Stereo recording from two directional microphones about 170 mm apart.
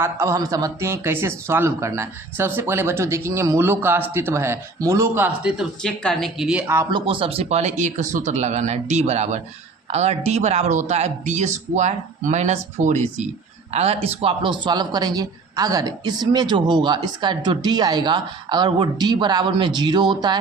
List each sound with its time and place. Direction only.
0.0 s speech: 15° right (ahead or behind)
6.9 s speech: 30° right (ahead or behind)